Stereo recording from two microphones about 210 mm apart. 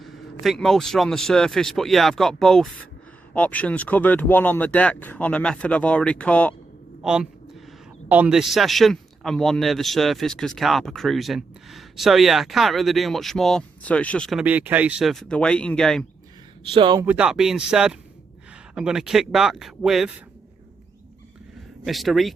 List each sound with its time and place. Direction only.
0.0 s a man's voice: centre (ahead or behind)
16.7 s speech: 20° right (ahead or behind)
17.1 s a man's voice: 5° right (ahead or behind)
21.8 s a man's voice: centre (ahead or behind)